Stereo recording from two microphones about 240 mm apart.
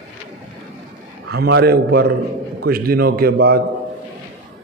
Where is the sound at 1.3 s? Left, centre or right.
Right.